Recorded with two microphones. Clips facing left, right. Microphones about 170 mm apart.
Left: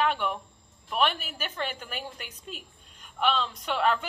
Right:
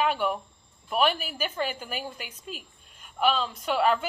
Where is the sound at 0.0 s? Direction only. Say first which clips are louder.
Right 2 dB; 5° right (ahead or behind).